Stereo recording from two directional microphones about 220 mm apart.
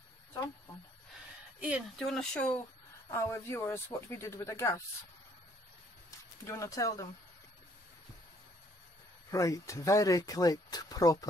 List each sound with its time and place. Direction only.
1.6 s speech: centre (ahead or behind)
6.0 s speech: 15° left (ahead or behind)
9.3 s speech: 15° left (ahead or behind)